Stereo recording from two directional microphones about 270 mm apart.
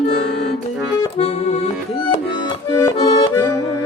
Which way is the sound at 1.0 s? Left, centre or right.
Left.